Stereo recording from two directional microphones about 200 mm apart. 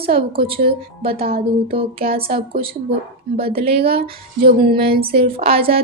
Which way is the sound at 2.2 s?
45° right (ahead or behind).